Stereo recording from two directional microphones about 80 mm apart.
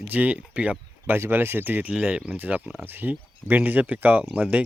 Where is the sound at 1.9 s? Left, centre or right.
Centre.